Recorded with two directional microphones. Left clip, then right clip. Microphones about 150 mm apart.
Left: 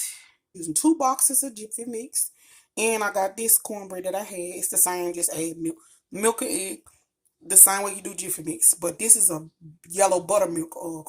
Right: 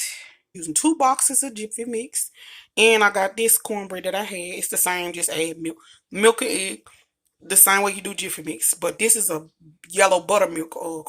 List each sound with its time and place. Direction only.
0.0 s a sound: centre (ahead or behind)
0.6 s speech: 30° right (ahead or behind)
1.3 s a woman's voice: centre (ahead or behind)